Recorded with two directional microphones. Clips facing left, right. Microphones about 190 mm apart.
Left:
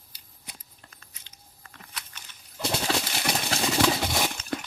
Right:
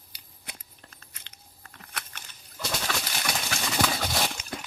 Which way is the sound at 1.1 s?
65° right (ahead or behind).